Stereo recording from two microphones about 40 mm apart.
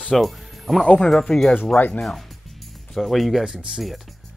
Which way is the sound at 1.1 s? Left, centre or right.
Centre.